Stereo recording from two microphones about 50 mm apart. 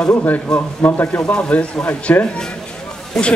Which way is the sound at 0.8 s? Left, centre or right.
Left.